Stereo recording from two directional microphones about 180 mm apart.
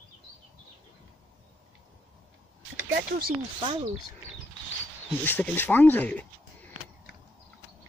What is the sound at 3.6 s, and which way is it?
Speech, 25° right (ahead or behind).